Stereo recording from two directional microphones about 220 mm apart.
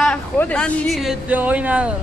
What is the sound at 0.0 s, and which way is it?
A man's voice, 5° left (ahead or behind).